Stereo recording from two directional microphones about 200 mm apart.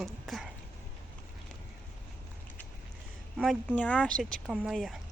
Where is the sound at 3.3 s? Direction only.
Centre (ahead or behind).